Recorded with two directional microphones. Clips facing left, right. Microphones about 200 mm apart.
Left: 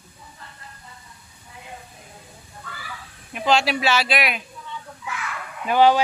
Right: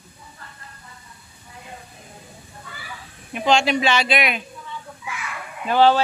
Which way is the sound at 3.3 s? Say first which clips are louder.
Right 2 dB; centre (ahead or behind).